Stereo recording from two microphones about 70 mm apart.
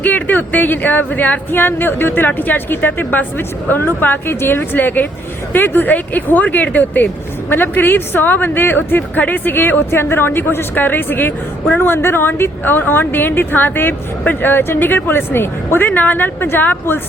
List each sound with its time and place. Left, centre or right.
0.0 s a woman's voice: left